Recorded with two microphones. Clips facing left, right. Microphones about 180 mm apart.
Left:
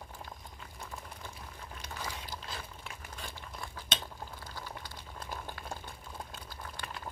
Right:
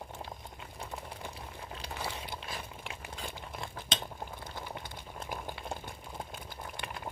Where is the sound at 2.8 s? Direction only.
20° right (ahead or behind).